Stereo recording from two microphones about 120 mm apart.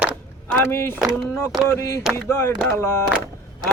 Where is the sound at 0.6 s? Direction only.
20° left (ahead or behind).